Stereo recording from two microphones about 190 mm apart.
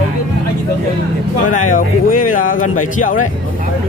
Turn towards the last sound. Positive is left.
turn(degrees=45)  # may be behind; listen again after turning